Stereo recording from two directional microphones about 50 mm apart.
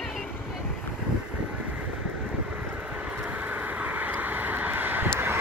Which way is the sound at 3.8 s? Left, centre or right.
Right.